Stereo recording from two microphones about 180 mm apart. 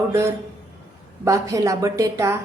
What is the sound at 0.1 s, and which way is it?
A woman's voice, 15° right (ahead or behind).